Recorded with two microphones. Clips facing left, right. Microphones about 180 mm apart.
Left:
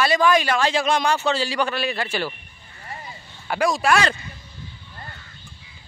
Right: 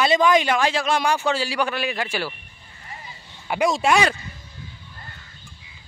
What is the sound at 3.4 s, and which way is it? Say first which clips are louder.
Speech: right 1 dB; 20° right (ahead or behind).